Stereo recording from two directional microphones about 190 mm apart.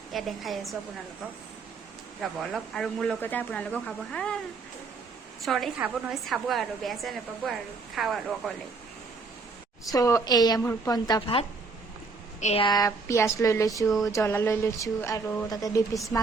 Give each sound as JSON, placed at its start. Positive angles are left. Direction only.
{"t": 0.1, "sound": "a woman's voice", "side_deg": 0}
{"t": 2.4, "sound": "a woman's voice", "side_deg": 0}
{"t": 5.5, "sound": "a woman's voice", "side_deg": 0}
{"t": 9.9, "sound": "a woman's voice", "side_deg": 15}
{"t": 12.4, "sound": "speech", "side_deg": 35}
{"t": 12.6, "sound": "speech", "side_deg": 20}